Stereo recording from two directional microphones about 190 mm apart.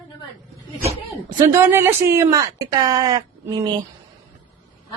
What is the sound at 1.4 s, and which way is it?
Speech, 15° right (ahead or behind).